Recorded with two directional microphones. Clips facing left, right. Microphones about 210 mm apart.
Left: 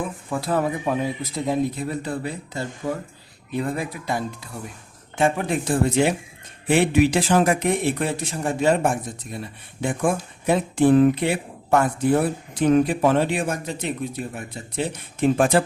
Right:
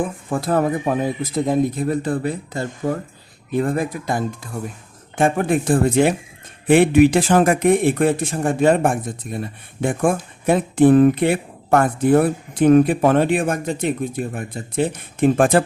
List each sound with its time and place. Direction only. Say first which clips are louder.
0.3 s speech: right 4 dB; 50° right (ahead or behind)